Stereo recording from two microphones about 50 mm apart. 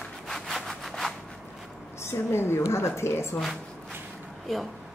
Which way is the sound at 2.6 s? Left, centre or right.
Left.